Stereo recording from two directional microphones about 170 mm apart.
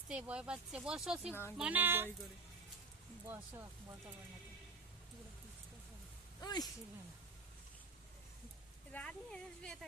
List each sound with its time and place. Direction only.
0.1 s speech: 5° right (ahead or behind)
1.3 s speech: 15° left (ahead or behind)
1.5 s speech: 5° right (ahead or behind)
3.2 s speech: 15° right (ahead or behind)
6.4 s speech: 25° left (ahead or behind)
8.9 s speech: 5° left (ahead or behind)